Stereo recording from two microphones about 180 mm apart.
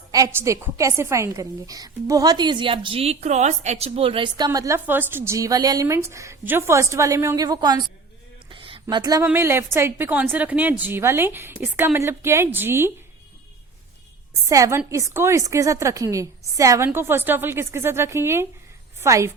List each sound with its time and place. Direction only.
0.1 s a woman's voice: 15° right (ahead or behind)
8.4 s a sound: 30° right (ahead or behind)
9.2 s a woman's voice: 15° right (ahead or behind)
14.5 s a woman's voice: 20° right (ahead or behind)